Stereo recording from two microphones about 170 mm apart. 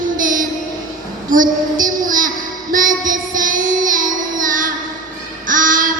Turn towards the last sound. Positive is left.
turn(degrees=-55)  # may be behind; listen again after turning